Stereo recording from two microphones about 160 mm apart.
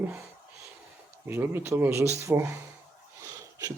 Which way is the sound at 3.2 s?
20° right (ahead or behind).